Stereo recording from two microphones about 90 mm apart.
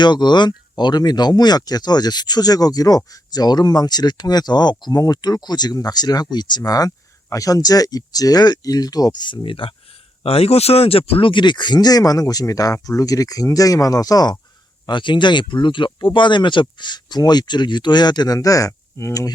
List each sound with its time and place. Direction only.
0.0 s speech: 55° left (ahead or behind); by 9.7 s 75° left (ahead or behind)
10.2 s speech: 90° left; by 14.3 s 45° left (ahead or behind)
14.8 s speech: 60° left (ahead or behind)
18.3 s speech: 40° left (ahead or behind)